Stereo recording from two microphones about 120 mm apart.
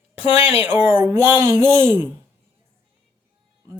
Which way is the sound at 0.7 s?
15° right (ahead or behind).